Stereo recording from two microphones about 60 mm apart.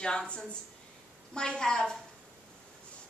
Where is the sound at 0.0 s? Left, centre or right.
Centre.